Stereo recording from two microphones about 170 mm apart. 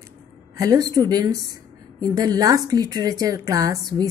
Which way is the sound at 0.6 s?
20° right (ahead or behind).